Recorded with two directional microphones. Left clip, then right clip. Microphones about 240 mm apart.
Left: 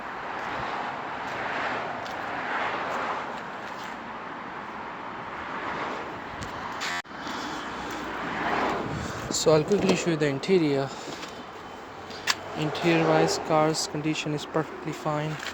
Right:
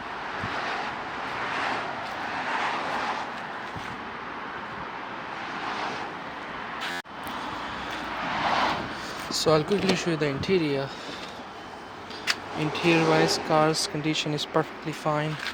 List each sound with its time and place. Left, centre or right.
1.5 s vehicle: right
8.4 s vehicle: right
9.3 s speech: centre
12.5 s speech: centre